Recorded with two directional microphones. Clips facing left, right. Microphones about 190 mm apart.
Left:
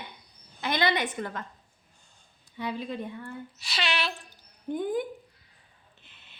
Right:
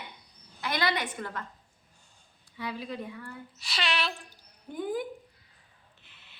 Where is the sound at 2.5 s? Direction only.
20° left (ahead or behind).